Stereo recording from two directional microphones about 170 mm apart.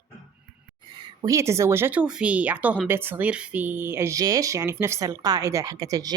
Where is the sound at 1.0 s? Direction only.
20° right (ahead or behind).